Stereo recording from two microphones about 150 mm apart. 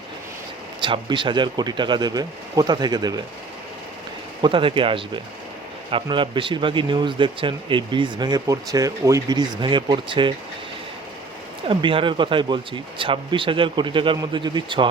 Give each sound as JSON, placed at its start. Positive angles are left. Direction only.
{"t": 0.8, "sound": "speech", "side_deg": -30}
{"t": 4.4, "sound": "speech", "side_deg": -35}
{"t": 11.7, "sound": "speech", "side_deg": -35}